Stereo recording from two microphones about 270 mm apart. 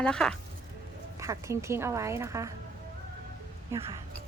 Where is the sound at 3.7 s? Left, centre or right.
Centre.